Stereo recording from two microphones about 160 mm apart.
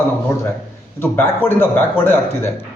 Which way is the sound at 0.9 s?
15° left (ahead or behind).